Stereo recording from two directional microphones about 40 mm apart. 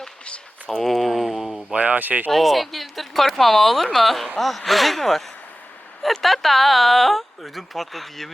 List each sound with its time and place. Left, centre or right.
0.8 s speech: centre
1.7 s speech: right
2.3 s speech: centre